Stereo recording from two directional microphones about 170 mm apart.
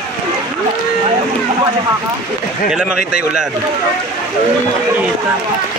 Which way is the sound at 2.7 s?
5° right (ahead or behind).